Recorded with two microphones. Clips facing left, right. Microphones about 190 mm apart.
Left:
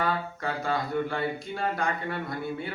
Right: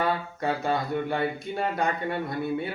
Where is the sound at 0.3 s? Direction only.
25° right (ahead or behind).